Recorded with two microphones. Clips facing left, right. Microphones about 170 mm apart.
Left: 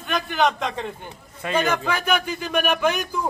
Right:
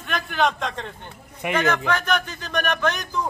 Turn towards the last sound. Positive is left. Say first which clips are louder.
# left 2 dB
turn(degrees=10)  # may be behind; listen again after turning